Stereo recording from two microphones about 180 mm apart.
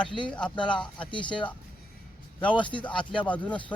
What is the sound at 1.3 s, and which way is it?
A man's voice, 5° left (ahead or behind).